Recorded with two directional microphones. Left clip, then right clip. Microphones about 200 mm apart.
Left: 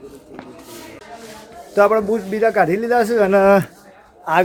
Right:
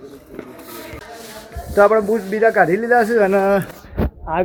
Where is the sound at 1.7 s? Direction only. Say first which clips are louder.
Right 1 dB; 5° left (ahead or behind).